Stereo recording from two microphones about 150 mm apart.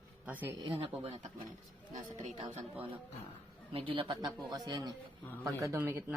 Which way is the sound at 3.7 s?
35° right (ahead or behind).